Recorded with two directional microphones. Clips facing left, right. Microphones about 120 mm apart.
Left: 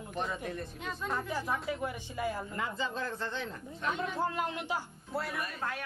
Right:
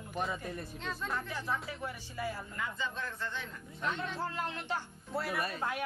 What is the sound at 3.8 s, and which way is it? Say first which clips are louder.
A man's voice: left 3 dB; 10° left (ahead or behind).